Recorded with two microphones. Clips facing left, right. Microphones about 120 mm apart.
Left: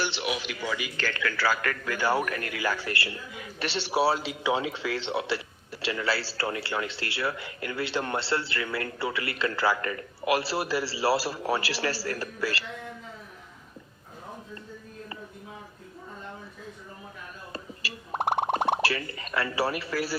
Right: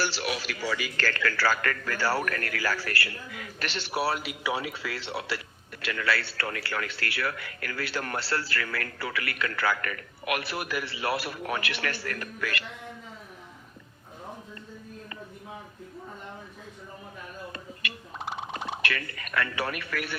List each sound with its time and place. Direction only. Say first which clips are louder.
0.0 s speech: even; 20° left (ahead or behind)
1.2 s a man's voice: even; centre (ahead or behind); by 12.6 s 30° left (ahead or behind)
18.1 s a sound: left 11 dB; 60° left (ahead or behind)
18.8 s speech: left 4 dB; 30° left (ahead or behind)